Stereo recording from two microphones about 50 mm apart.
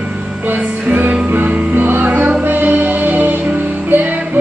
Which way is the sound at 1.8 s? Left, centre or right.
Right.